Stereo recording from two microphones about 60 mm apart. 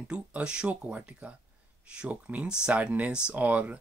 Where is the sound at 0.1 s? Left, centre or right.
Centre.